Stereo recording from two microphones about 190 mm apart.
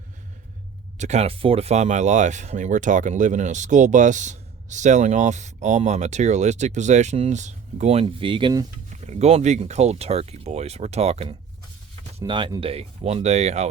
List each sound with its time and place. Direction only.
0.9 s speech: 35° right (ahead or behind)
12.2 s speech: 25° right (ahead or behind)